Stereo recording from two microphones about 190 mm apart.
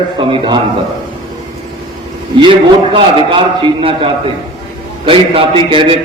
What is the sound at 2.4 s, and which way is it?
A man's voice, 25° right (ahead or behind).